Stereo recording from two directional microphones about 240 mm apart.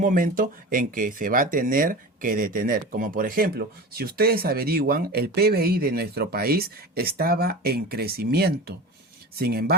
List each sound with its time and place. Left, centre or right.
0.0 s speech: right